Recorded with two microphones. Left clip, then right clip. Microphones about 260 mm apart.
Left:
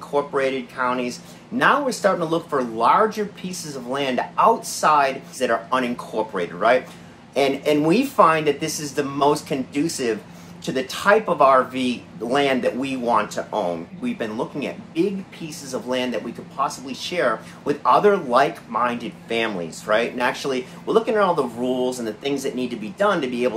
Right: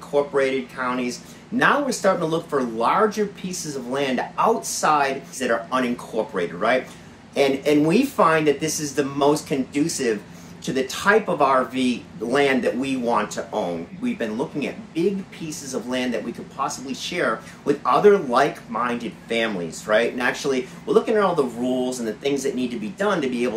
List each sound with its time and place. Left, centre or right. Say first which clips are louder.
0.1 s speech: right 1 dB; centre